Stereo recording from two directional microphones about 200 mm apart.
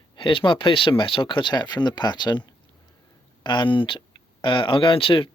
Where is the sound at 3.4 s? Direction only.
25° left (ahead or behind).